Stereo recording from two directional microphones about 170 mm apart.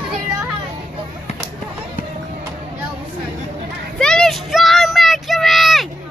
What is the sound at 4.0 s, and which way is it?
Child singing, 5° left (ahead or behind).